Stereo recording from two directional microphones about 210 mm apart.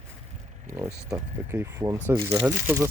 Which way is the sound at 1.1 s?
15° right (ahead or behind).